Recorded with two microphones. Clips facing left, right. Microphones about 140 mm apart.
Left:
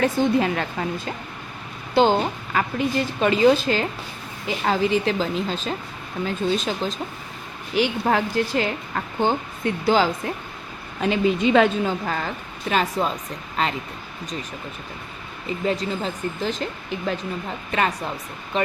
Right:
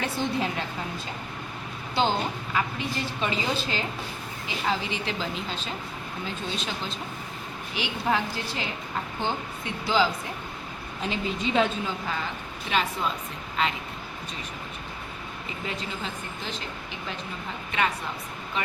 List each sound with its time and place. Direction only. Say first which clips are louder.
0.3 s a woman's voice: left 7 dB; 65° left (ahead or behind)
2.0 s a woman's voice: left 8 dB; 55° left (ahead or behind)
11.0 s a woman's voice: left 9 dB; 65° left (ahead or behind); by 13.7 s 40° left (ahead or behind)
15.6 s speech: left 10 dB; 40° left (ahead or behind)
17.7 s speech: left 4 dB; 40° left (ahead or behind)